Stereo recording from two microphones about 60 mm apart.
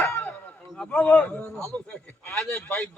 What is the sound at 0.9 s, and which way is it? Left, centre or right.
Music, left.